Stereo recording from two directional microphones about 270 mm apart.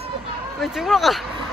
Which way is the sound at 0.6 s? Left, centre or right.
Centre.